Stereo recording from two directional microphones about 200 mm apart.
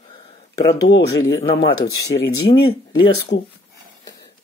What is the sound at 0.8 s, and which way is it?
Speech, 60° left (ahead or behind).